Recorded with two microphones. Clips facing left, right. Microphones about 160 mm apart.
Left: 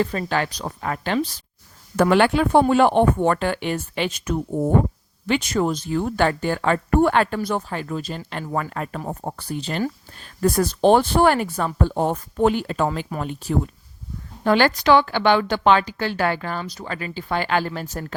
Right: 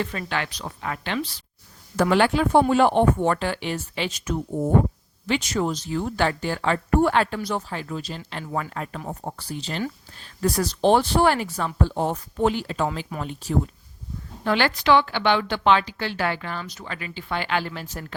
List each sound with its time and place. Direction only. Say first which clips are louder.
0.0 s speech: left 5 dB; 35° left (ahead or behind)
2.0 s speech: left 3 dB; 60° left (ahead or behind)
14.4 s speech: left 4 dB; 45° left (ahead or behind)